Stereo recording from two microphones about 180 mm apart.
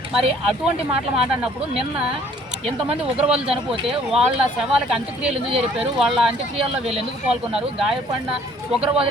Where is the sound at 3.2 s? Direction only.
5° right (ahead or behind).